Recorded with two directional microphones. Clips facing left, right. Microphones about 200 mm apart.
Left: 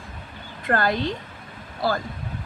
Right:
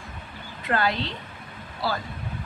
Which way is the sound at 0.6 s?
50° left (ahead or behind).